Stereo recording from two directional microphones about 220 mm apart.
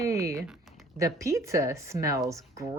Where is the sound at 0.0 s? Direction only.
15° right (ahead or behind).